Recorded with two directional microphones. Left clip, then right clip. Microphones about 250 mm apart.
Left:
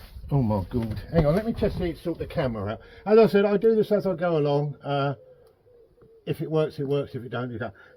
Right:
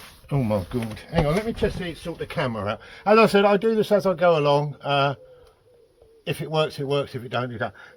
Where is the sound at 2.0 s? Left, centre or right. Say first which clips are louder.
Even; centre.